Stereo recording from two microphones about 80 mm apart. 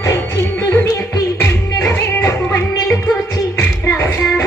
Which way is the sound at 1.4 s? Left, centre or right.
Left.